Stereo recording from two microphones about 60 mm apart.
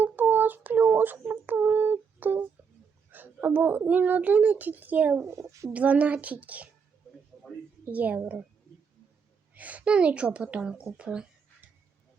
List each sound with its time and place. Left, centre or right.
0.0 s a sound: right
3.1 s a child's voice: right
5.2 s speech: right
5.7 s a child's voice: right
7.9 s a child's voice: right
9.6 s a child's voice: right